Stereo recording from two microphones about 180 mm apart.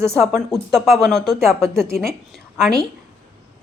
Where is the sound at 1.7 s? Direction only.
Centre (ahead or behind).